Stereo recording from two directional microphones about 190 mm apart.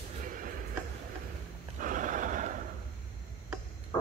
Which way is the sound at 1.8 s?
45° right (ahead or behind).